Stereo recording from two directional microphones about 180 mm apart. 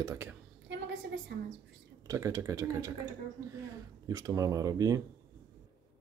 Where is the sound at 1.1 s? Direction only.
80° right.